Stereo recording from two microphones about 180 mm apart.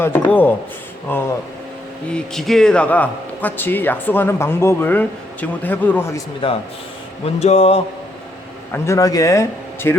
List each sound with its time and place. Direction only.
0.0 s a man's voice: 10° left (ahead or behind)
6.4 s a man's voice: 30° left (ahead or behind)
8.7 s a man's voice: 15° left (ahead or behind)